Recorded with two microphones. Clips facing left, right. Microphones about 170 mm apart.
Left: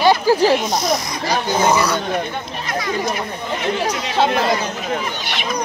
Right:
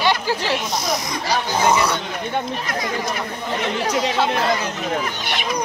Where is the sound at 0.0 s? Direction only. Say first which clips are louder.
Left 7 dB; 40° left (ahead or behind).